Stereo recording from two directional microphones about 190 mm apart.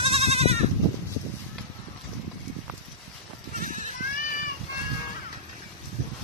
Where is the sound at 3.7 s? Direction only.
40° right (ahead or behind).